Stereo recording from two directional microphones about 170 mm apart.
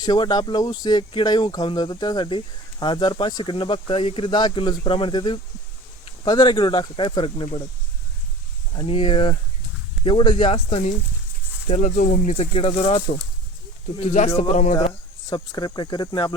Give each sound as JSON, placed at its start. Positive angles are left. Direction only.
{"t": 0.0, "sound": "speech", "side_deg": 25}
{"t": 8.7, "sound": "speech", "side_deg": 30}
{"t": 14.0, "sound": "a man's voice", "side_deg": 50}
{"t": 15.3, "sound": "speech", "side_deg": 25}